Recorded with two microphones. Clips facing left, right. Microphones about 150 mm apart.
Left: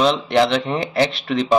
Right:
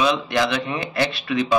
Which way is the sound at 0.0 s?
60° left (ahead or behind).